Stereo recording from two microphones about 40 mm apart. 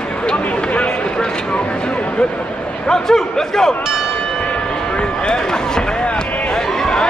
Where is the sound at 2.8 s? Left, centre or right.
Centre.